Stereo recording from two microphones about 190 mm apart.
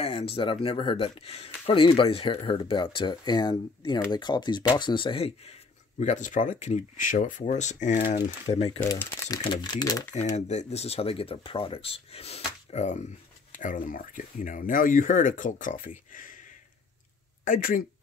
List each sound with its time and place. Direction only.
0.0 s speech: 30° left (ahead or behind)
8.8 s speech: 15° left (ahead or behind)
9.4 s speech: 25° left (ahead or behind)
10.1 s speech: 35° left (ahead or behind)
17.5 s speech: 45° left (ahead or behind)